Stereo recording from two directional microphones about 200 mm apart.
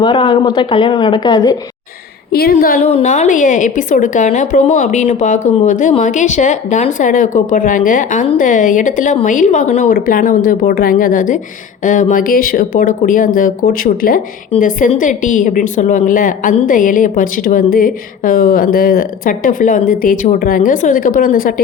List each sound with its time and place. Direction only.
0.0 s speech: 25° left (ahead or behind)
2.3 s a woman's voice: 50° left (ahead or behind)